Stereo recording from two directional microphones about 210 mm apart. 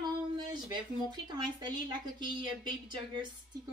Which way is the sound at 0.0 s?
20° right (ahead or behind).